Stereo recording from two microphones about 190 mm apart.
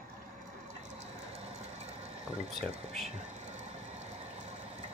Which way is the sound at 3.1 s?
40° right (ahead or behind).